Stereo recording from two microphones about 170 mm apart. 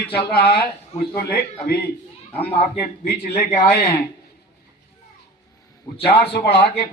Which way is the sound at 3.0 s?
70° left (ahead or behind).